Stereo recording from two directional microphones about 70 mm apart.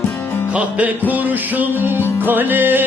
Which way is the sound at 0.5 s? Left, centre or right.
Right.